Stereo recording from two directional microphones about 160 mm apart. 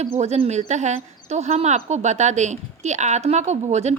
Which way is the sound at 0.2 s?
45° right (ahead or behind).